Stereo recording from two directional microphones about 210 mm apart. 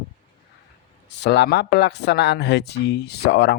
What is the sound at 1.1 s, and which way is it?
Speech, 50° left (ahead or behind).